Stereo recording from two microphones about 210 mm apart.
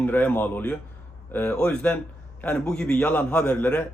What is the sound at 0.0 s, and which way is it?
A man's voice, 10° left (ahead or behind).